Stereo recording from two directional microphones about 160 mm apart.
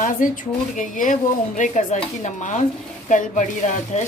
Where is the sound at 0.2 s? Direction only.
55° left (ahead or behind).